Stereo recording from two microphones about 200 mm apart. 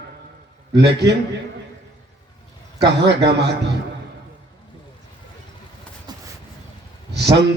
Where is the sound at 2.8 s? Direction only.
55° right (ahead or behind).